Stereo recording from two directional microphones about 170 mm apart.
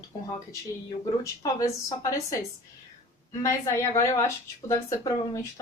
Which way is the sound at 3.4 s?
15° left (ahead or behind).